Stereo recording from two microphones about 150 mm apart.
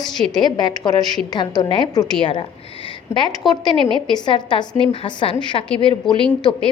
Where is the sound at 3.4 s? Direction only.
Centre (ahead or behind).